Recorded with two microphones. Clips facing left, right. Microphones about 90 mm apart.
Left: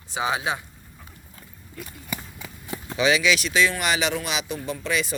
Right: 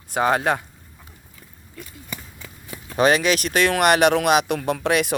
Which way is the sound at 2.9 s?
50° right (ahead or behind).